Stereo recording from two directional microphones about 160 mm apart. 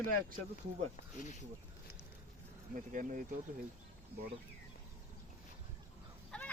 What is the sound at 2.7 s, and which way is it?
Speech, 55° right (ahead or behind).